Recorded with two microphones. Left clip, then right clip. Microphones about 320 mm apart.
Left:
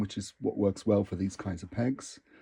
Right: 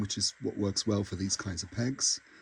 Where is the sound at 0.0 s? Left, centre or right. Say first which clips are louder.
Right 1 dB; centre.